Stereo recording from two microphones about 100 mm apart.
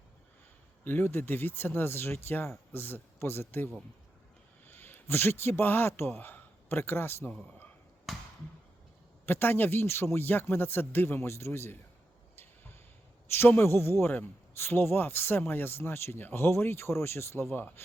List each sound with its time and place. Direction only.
0.9 s a man's voice: 20° left (ahead or behind)
4.7 s a man's voice: 20° left (ahead or behind)
8.1 s basketball bounce: centre (ahead or behind)
9.2 s a man's voice: 20° left (ahead or behind)
13.3 s a man's voice: 25° left (ahead or behind)